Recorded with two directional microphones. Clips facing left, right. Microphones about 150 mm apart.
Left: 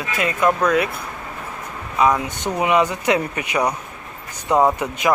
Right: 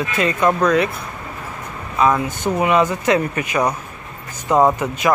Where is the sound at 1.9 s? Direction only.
15° left (ahead or behind).